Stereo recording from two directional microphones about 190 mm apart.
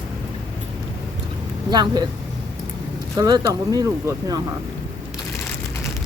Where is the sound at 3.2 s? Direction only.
20° right (ahead or behind).